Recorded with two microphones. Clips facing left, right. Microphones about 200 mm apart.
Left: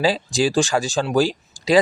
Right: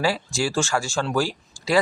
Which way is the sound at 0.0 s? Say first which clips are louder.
Left 5 dB; 15° left (ahead or behind).